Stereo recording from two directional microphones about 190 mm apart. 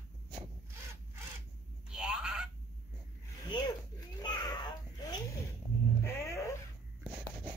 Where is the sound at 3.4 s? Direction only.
25° left (ahead or behind).